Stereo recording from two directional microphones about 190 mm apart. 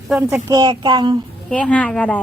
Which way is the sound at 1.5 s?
5° left (ahead or behind).